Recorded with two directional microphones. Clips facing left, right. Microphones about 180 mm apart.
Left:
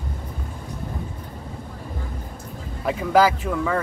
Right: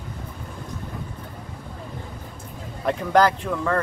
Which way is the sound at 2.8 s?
5° left (ahead or behind).